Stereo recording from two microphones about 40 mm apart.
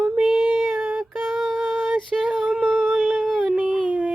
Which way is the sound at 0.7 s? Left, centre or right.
Right.